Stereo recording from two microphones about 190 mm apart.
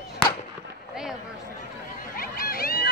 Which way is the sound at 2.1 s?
50° left (ahead or behind).